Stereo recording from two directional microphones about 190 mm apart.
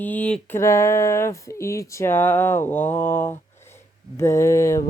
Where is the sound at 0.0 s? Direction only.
10° left (ahead or behind).